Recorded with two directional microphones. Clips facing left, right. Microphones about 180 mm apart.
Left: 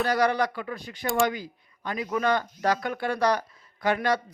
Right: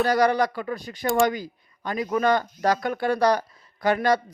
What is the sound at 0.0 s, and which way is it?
A man's voice, 40° right (ahead or behind).